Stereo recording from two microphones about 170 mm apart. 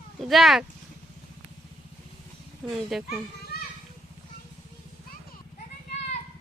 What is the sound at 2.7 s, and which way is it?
Speech, centre (ahead or behind).